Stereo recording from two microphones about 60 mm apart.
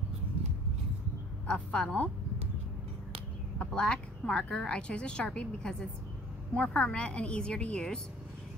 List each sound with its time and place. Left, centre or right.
1.5 s a woman's voice: centre
3.5 s a woman's voice: centre